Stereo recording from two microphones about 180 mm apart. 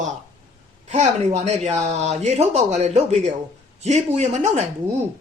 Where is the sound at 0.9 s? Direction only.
40° right (ahead or behind).